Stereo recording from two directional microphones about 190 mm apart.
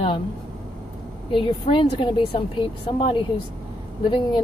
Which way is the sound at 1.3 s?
25° left (ahead or behind).